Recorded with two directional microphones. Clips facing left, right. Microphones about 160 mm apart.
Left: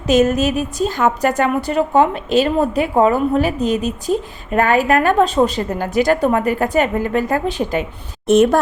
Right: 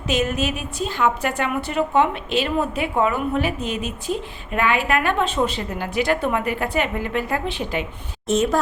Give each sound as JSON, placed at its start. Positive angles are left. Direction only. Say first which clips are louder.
{"t": 0.1, "sound": "a woman's voice", "louder": "left 8 dB", "side_deg": 40}
{"t": 8.3, "sound": "a woman's voice", "louder": "left 8 dB", "side_deg": 60}